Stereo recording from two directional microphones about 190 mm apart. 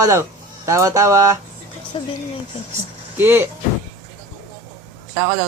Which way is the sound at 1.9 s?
30° left (ahead or behind).